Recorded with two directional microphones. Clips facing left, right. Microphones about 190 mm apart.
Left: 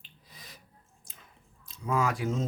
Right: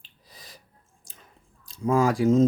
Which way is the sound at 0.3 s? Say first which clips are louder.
Right 3 dB; 40° right (ahead or behind).